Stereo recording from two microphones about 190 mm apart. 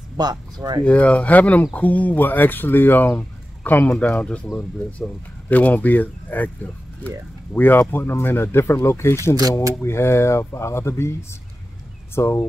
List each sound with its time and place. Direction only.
0.2 s speech: 20° right (ahead or behind)
0.8 s speech: 5° left (ahead or behind)
12.2 s speech: 15° left (ahead or behind)